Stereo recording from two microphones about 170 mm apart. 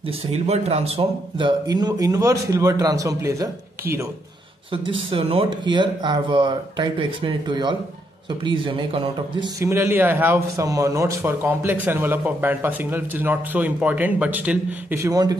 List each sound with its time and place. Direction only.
0.3 s speech: 40° right (ahead or behind)
1.7 s speech: 25° right (ahead or behind)
4.8 s speech: 30° right (ahead or behind)
9.6 s a man's voice: 15° right (ahead or behind)